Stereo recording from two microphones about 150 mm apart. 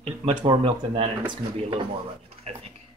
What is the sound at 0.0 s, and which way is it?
Speech, 35° right (ahead or behind).